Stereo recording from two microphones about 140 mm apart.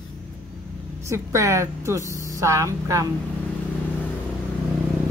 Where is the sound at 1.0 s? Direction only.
20° right (ahead or behind).